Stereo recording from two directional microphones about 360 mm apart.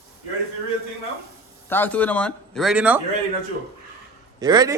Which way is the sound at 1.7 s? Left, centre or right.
Centre.